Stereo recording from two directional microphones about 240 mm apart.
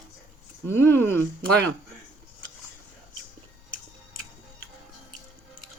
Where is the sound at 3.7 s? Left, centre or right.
Left.